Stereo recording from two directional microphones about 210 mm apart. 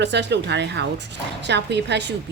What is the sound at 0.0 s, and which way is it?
Speech, 55° right (ahead or behind).